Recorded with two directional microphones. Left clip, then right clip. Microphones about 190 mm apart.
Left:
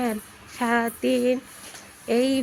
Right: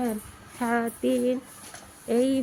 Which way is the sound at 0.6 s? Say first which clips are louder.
Left 3 dB; centre (ahead or behind).